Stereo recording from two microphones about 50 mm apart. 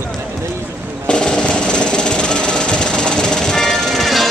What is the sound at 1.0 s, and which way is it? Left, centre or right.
Music, centre.